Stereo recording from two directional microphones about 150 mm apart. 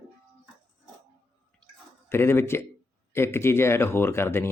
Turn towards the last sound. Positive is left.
turn(degrees=15)  # may be behind; listen again after turning